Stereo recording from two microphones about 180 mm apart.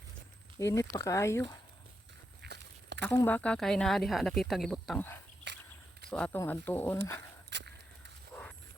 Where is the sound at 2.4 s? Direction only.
70° right (ahead or behind).